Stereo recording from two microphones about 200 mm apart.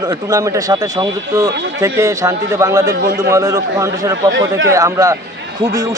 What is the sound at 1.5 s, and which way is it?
Speech, 65° right (ahead or behind).